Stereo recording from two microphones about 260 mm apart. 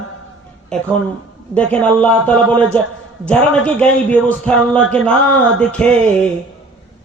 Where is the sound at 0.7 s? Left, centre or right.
Centre.